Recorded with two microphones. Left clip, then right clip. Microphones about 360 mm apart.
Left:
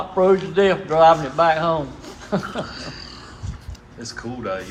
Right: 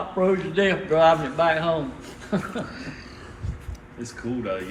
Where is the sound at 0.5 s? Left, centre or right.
Centre.